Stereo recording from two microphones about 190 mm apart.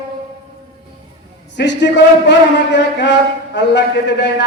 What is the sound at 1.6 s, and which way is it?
A man's voice, 65° left (ahead or behind).